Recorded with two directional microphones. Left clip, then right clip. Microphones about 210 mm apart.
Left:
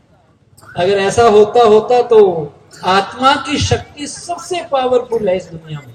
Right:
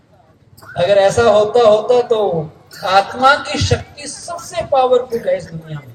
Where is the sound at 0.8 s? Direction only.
45° right (ahead or behind).